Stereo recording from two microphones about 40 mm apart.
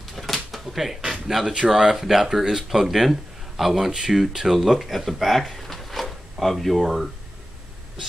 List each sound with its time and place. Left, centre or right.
0.1 s speech: centre